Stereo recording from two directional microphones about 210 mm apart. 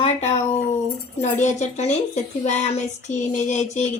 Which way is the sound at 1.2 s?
35° left (ahead or behind).